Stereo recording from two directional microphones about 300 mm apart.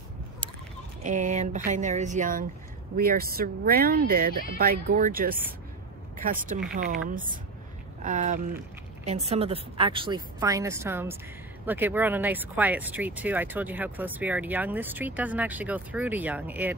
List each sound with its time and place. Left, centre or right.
1.0 s a woman's voice: right; by 16.7 s centre